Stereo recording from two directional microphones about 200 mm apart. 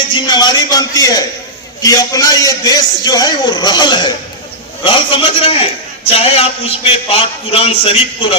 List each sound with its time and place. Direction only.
0.1 s a man's voice: 20° left (ahead or behind)